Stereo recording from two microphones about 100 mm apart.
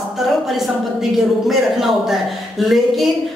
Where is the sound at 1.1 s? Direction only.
Centre (ahead or behind).